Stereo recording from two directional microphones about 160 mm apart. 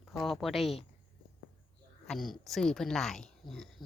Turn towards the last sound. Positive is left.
turn(degrees=5)  # may be behind; listen again after turning